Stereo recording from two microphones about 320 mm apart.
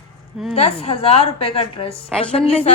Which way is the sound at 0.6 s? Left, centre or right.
Centre.